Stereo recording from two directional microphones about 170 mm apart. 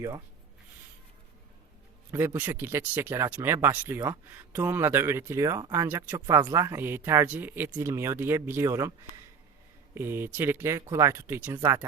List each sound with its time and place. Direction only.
2.1 s speech: 10° right (ahead or behind)